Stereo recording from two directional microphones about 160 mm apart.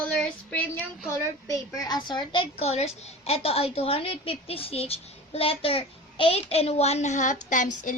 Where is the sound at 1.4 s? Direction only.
20° left (ahead or behind).